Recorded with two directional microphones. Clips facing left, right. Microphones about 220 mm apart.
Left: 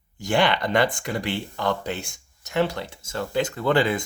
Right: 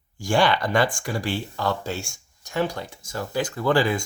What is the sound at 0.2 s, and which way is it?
Speech, 20° left (ahead or behind).